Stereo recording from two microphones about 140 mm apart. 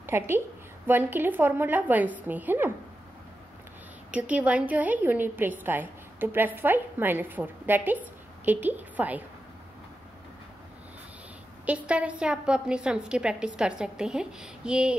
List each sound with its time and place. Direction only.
0.0 s a woman's voice: 15° right (ahead or behind)
4.1 s a woman's voice: 10° right (ahead or behind)
11.6 s a woman's voice: 10° right (ahead or behind)